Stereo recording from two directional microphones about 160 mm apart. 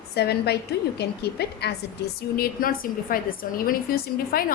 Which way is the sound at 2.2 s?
70° left (ahead or behind).